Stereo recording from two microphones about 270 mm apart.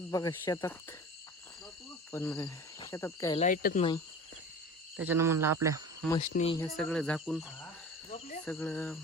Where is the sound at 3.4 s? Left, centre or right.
Left.